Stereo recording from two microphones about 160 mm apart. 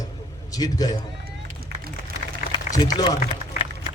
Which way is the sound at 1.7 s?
90° right.